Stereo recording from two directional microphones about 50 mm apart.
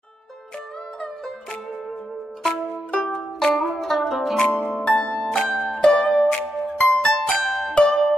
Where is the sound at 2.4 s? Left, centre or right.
Centre.